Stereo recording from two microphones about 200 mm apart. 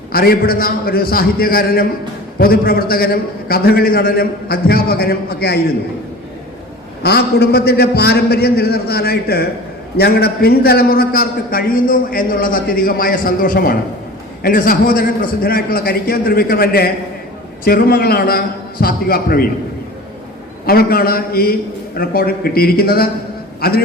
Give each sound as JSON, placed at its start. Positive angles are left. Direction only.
{"t": 0.1, "sound": "a man's voice", "side_deg": 50}
{"t": 7.0, "sound": "a man's voice", "side_deg": 55}
{"t": 20.7, "sound": "a man's voice", "side_deg": 50}